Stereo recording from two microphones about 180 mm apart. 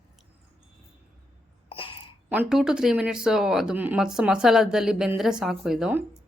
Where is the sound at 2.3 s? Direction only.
5° right (ahead or behind).